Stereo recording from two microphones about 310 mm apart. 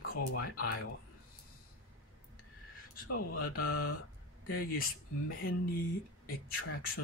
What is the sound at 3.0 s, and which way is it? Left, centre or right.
Speech, left.